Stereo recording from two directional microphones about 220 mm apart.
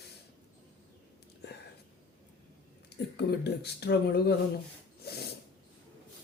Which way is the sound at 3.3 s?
50° left (ahead or behind).